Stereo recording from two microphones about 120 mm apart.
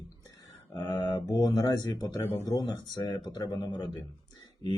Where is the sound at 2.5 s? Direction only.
35° left (ahead or behind).